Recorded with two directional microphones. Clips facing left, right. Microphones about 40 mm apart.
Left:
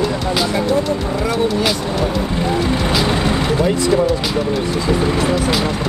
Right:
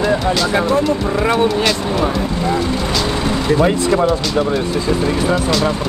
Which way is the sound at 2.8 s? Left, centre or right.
Centre.